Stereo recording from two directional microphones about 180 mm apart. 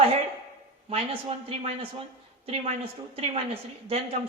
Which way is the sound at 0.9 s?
30° right (ahead or behind).